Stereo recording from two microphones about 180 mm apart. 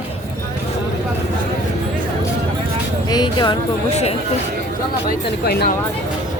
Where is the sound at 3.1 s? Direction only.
25° left (ahead or behind).